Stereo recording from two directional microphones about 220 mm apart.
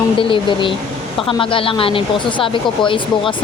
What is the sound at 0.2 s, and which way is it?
Speech, 20° left (ahead or behind).